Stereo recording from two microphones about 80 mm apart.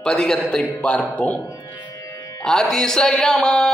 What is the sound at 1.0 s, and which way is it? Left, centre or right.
Speech, centre.